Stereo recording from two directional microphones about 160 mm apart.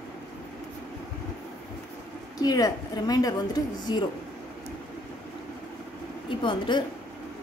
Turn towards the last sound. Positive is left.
turn(degrees=30)  # may be behind; listen again after turning